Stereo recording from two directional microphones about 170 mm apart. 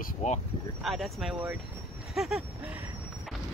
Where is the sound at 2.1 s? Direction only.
Centre (ahead or behind).